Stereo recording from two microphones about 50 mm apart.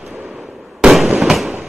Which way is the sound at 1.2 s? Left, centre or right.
Centre.